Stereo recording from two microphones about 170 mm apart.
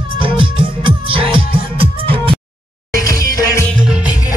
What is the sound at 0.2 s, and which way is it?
Music, 30° right (ahead or behind).